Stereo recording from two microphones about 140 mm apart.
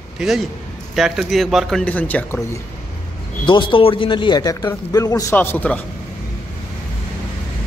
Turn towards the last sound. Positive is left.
turn(degrees=15)  # may be behind; listen again after turning